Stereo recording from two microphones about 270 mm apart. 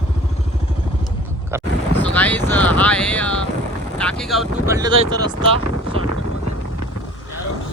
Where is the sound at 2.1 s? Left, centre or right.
Centre.